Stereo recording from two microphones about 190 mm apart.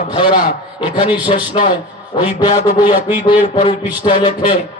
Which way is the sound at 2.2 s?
20° left (ahead or behind).